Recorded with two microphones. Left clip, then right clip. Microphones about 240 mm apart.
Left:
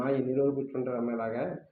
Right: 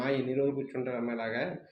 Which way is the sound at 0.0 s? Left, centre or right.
Centre.